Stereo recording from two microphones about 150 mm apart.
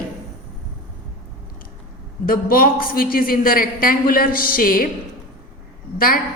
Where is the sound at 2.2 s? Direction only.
75° left (ahead or behind).